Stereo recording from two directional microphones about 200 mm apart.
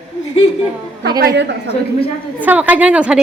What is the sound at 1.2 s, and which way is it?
Speech, 50° right (ahead or behind).